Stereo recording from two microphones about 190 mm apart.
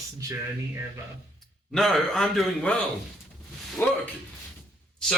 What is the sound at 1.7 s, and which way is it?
A man's voice, 5° left (ahead or behind).